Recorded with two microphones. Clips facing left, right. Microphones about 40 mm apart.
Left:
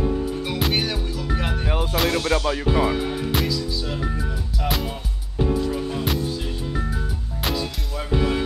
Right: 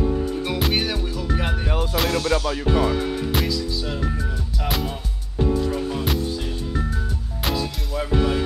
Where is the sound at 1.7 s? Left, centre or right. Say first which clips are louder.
Left 1 dB; centre.